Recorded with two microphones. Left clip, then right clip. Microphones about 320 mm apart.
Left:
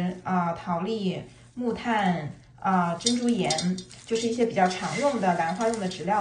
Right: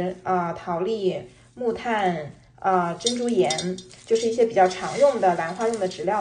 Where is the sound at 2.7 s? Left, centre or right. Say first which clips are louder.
Right 3 dB; centre.